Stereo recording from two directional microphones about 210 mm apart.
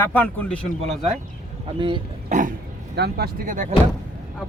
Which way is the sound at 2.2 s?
35° right (ahead or behind).